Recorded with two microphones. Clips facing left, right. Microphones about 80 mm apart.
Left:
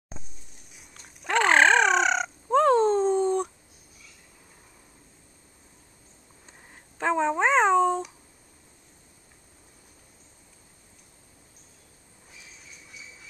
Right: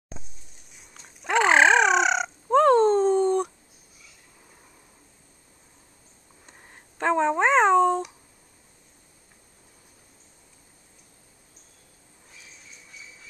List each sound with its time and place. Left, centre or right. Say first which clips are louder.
0.7 s fowl: right 1 dB; centre
6.4 s cat: right 1 dB; centre